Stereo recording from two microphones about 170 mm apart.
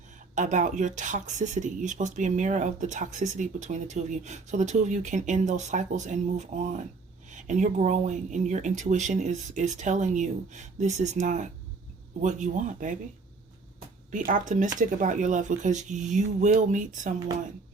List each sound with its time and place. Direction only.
0.3 s speech: 45° right (ahead or behind)
14.1 s speech: 50° right (ahead or behind)